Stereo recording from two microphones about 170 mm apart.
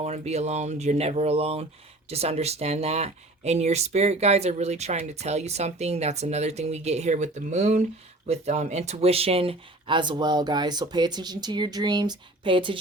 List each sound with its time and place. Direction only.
0.0 s speech: 40° right (ahead or behind)